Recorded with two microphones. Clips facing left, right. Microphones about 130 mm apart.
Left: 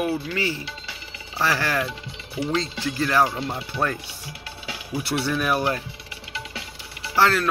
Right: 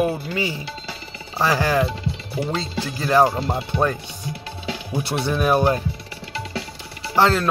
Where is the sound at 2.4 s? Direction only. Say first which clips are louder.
Right 1 dB; 40° right (ahead or behind).